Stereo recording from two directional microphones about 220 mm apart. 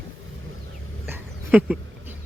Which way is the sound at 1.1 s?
5° right (ahead or behind).